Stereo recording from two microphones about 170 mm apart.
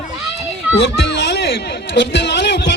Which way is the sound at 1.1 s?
85° left.